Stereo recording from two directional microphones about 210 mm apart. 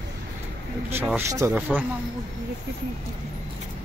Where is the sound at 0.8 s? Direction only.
10° right (ahead or behind).